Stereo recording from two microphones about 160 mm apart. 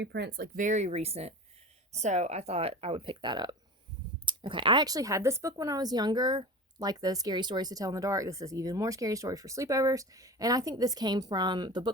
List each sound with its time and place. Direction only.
0.0 s speech: 90° right; by 11.9 s 25° right (ahead or behind)